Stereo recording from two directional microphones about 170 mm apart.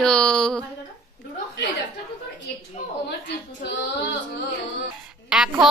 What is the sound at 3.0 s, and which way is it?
Speech, 90° left.